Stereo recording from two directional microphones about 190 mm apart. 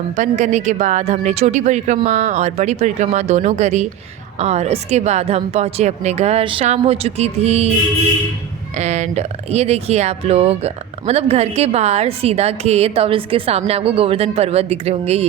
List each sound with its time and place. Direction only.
0.2 s speech: 40° right (ahead or behind)
8.7 s speech: 35° right (ahead or behind)